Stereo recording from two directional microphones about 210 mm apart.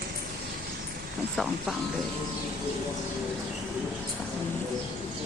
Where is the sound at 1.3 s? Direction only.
Centre (ahead or behind).